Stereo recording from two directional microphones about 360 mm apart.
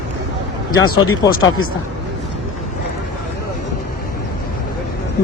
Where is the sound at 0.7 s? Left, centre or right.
Left.